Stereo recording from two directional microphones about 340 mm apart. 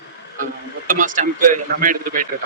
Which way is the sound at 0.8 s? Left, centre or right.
Right.